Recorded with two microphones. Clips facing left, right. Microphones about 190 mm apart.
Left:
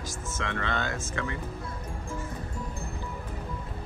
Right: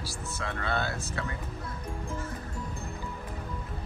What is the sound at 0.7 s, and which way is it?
Speech, 10° right (ahead or behind).